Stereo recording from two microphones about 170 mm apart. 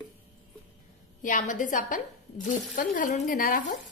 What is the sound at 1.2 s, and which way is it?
A woman's voice, 50° left (ahead or behind).